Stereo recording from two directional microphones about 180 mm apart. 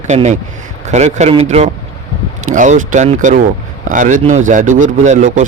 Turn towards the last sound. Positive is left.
turn(degrees=-45)  # may be behind; listen again after turning